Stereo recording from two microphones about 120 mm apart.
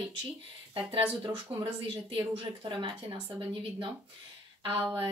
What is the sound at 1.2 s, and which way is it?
Speech, 45° right (ahead or behind).